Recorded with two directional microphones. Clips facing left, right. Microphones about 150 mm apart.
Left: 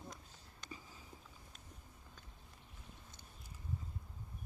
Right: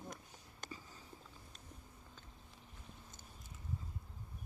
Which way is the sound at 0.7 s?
10° left (ahead or behind).